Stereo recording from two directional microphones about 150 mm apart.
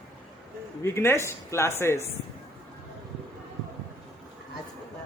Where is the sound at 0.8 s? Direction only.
15° left (ahead or behind).